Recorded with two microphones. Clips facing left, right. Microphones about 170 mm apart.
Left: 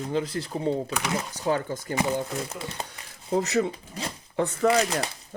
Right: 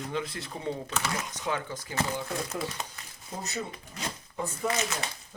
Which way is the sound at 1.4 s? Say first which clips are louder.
Left 8 dB; 40° left (ahead or behind).